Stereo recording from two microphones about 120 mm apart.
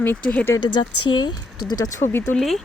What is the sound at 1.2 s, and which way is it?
Speech, 35° left (ahead or behind).